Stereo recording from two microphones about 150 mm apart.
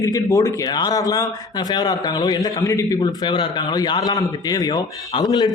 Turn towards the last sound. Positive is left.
turn(degrees=25)  # may be behind; listen again after turning